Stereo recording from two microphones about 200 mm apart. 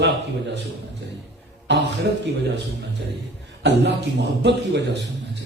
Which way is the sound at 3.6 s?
55° right (ahead or behind).